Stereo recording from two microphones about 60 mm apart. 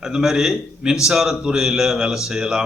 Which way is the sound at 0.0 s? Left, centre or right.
Centre.